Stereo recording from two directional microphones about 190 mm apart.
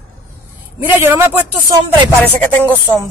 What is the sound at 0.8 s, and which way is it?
Speech, 10° right (ahead or behind).